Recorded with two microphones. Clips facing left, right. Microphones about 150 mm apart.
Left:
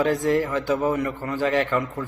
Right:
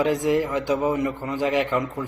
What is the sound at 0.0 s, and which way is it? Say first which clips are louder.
A man's voice: even; 15° right (ahead or behind).